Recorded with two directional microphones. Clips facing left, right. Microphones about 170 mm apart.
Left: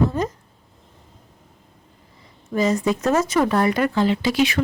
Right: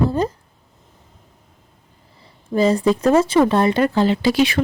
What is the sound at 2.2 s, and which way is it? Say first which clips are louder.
Speech: right 4 dB; 30° right (ahead or behind).